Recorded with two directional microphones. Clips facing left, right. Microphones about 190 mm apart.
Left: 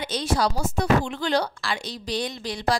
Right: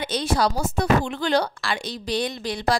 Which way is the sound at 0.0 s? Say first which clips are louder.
Right 2 dB; 55° right (ahead or behind).